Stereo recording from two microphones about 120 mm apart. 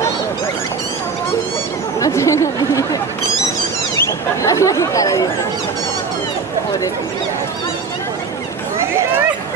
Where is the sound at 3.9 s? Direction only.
25° left (ahead or behind).